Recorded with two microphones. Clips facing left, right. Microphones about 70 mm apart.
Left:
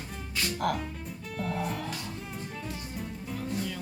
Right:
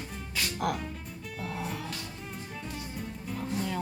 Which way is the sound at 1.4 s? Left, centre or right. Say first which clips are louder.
Left 4 dB; centre.